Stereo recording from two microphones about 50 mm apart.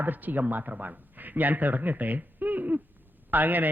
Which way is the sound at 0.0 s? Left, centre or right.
Right.